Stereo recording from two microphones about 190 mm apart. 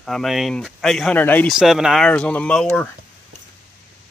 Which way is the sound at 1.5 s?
Centre (ahead or behind).